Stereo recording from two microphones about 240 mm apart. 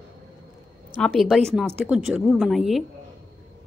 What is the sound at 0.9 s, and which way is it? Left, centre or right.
A woman's voice, centre.